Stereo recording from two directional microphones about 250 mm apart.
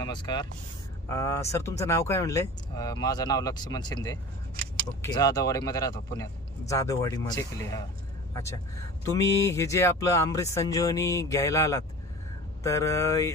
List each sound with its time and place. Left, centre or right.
0.0 s speech: centre
9.0 s speech: centre